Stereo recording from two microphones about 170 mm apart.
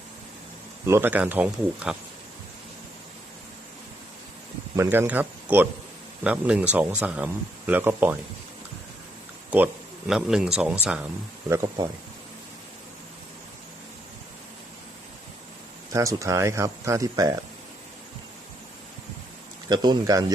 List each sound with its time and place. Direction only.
0.9 s speech: 15° right (ahead or behind)
4.8 s speech: 10° right (ahead or behind)
10.1 s speech: 5° right (ahead or behind)
11.4 s speech: 15° right (ahead or behind)
15.9 s speech: 20° right (ahead or behind)
19.6 s speech: 25° right (ahead or behind)